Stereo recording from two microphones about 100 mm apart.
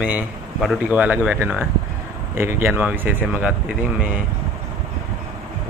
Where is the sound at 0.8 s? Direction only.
15° right (ahead or behind).